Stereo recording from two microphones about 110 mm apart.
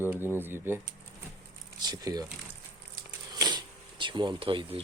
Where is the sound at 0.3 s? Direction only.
20° right (ahead or behind).